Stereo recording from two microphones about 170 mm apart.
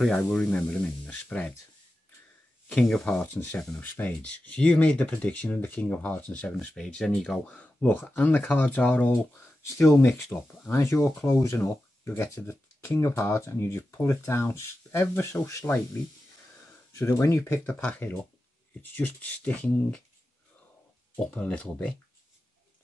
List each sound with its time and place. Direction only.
0.0 s speech: 5° left (ahead or behind)
2.7 s speech: 5° left (ahead or behind)
17.0 s speech: 15° left (ahead or behind)
21.2 s speech: 5° left (ahead or behind)